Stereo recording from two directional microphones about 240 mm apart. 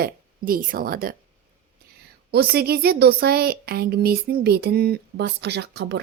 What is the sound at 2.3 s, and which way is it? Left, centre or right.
A woman's voice, right.